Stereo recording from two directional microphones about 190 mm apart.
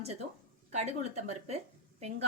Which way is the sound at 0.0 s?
35° right (ahead or behind).